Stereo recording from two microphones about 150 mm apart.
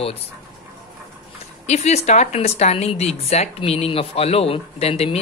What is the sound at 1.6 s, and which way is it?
Speech, 45° left (ahead or behind).